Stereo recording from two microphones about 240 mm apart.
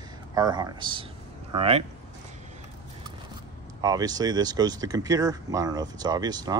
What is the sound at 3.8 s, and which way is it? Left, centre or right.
Speech, centre.